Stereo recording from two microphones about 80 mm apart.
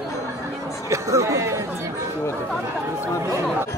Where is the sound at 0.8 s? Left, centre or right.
Right.